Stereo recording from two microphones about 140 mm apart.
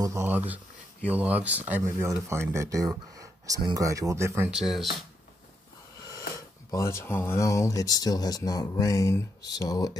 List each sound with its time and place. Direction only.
0.0 s speech: 20° right (ahead or behind)
4.5 s speech: 5° right (ahead or behind)
6.7 s speech: 20° left (ahead or behind)